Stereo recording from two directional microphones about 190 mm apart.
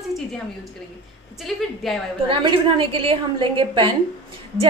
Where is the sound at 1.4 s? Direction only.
Centre (ahead or behind).